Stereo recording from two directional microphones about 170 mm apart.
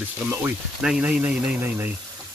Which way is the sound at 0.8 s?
5° right (ahead or behind).